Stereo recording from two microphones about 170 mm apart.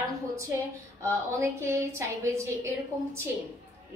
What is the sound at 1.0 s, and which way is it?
A woman's voice, 15° right (ahead or behind).